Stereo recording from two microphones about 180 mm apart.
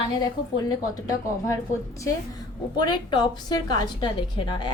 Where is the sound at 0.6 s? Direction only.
20° left (ahead or behind).